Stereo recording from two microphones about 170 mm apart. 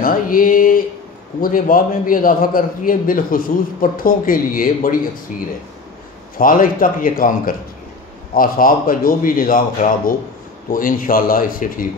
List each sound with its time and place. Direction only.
0.0 s a sound: 55° left (ahead or behind)
1.4 s a man's voice: 55° left (ahead or behind)
6.3 s a man's voice: 55° left (ahead or behind)